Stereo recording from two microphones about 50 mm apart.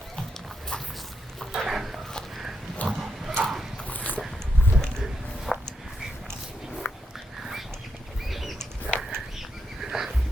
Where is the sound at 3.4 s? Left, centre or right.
Centre.